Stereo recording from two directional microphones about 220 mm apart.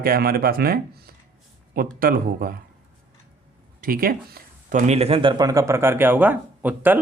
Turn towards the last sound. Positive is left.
turn(degrees=-10)  # may be behind; listen again after turning